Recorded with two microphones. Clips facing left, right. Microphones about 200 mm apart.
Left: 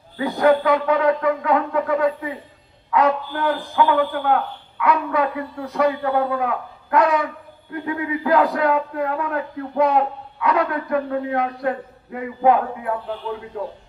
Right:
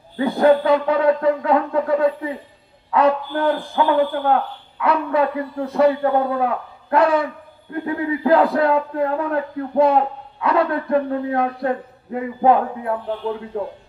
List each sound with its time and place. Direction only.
0.2 s a man's voice: 30° right (ahead or behind)